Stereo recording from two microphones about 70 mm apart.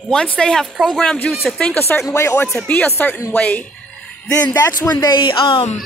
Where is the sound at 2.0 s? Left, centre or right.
Left.